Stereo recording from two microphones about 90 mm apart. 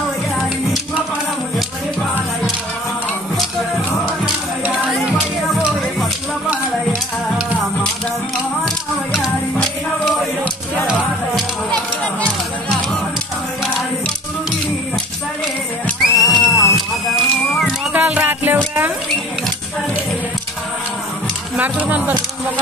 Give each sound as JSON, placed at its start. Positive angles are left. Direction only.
{"t": 4.9, "sound": "music", "side_deg": 0}
{"t": 16.0, "sound": "music", "side_deg": 0}
{"t": 17.9, "sound": "music", "side_deg": -15}
{"t": 21.5, "sound": "speech", "side_deg": -15}